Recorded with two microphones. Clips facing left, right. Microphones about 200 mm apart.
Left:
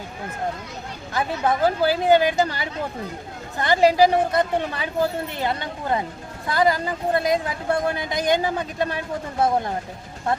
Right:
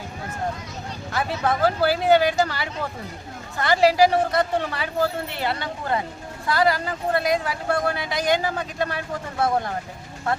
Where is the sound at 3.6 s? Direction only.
20° left (ahead or behind).